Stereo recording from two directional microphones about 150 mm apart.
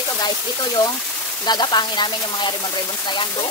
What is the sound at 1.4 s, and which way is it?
Speech, 30° left (ahead or behind).